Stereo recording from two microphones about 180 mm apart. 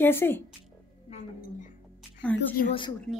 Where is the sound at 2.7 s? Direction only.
25° left (ahead or behind).